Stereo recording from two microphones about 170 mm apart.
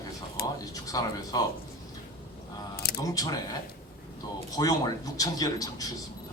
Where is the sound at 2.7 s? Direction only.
65° left (ahead or behind).